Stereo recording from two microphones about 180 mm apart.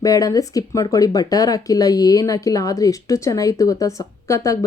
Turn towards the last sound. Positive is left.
turn(degrees=15)  # may be behind; listen again after turning